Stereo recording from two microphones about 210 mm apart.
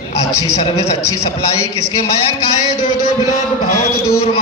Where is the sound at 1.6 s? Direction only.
90° left.